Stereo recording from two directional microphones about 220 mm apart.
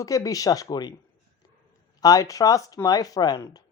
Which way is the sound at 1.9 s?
15° left (ahead or behind).